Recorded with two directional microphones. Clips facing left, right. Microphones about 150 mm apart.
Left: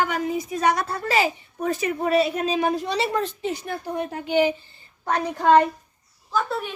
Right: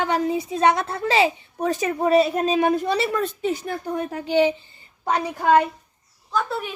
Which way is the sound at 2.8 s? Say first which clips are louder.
Right 2 dB; 50° right (ahead or behind).